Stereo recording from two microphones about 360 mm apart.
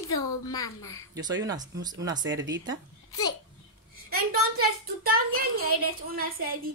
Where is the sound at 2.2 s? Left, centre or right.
Right.